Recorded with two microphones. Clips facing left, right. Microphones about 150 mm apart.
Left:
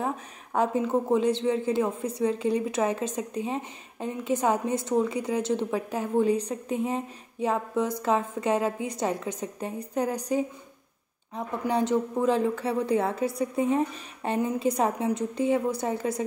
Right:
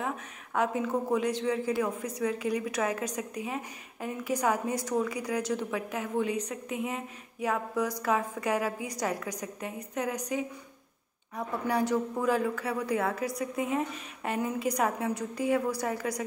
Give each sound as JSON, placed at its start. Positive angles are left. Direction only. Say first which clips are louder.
{"t": 0.0, "sound": "a woman's voice", "louder": "left 4 dB", "side_deg": 30}
{"t": 11.3, "sound": "a woman's voice", "louder": "left 2 dB", "side_deg": 20}